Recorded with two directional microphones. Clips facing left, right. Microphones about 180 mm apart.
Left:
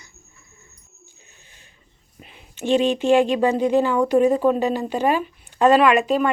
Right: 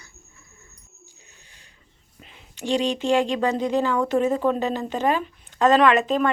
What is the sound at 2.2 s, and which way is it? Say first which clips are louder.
Speech: left 4 dB; 15° left (ahead or behind).